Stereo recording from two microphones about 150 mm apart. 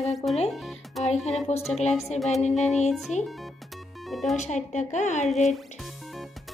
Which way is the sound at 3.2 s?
Centre (ahead or behind).